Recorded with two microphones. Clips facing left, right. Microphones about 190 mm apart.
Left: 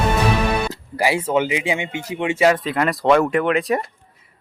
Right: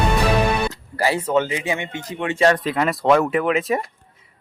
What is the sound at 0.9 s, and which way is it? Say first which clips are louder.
Speech: left 1 dB; 10° left (ahead or behind).